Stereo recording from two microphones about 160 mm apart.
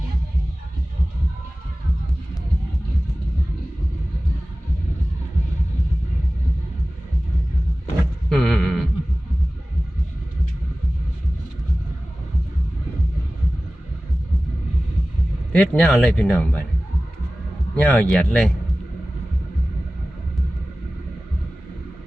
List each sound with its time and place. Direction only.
8.3 s a sound: 5° left (ahead or behind)
15.5 s speech: 10° left (ahead or behind)
17.7 s speech: 10° left (ahead or behind)